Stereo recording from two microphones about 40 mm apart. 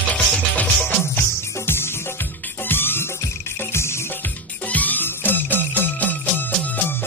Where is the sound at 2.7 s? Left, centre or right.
Left.